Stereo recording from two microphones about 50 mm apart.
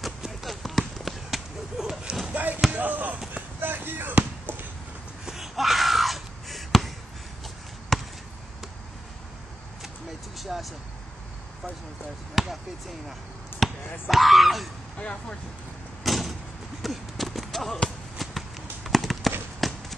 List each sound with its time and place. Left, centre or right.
0.0 s basketball bounce: centre
2.3 s basketball bounce: right
5.2 s a sound: centre
7.9 s basketball bounce: centre
10.3 s vehicle: centre
12.4 s basketball bounce: centre
13.6 s speech: centre
15.0 s speech: left
16.0 s vehicle: centre
16.8 s basketball bounce: centre
18.9 s a sound: centre